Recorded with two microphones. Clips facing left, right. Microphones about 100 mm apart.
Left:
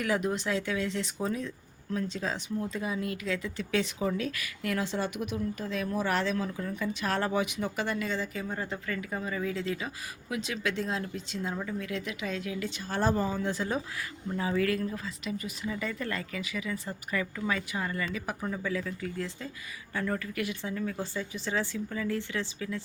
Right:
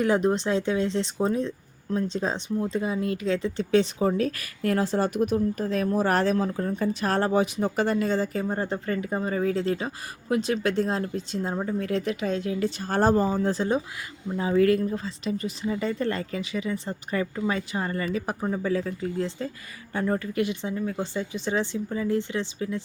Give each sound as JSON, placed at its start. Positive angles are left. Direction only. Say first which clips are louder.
{"t": 0.0, "sound": "speech", "louder": "right 7 dB", "side_deg": -30}